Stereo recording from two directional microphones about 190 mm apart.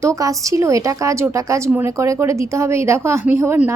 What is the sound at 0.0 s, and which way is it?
A woman's voice, 15° right (ahead or behind).